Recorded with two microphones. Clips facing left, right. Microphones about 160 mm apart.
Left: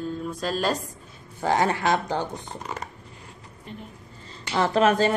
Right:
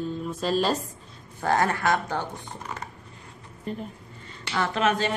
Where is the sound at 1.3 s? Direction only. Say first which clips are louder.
Left 1 dB; 15° left (ahead or behind).